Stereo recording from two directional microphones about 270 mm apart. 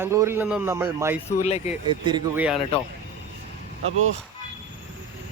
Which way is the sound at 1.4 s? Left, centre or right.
Left.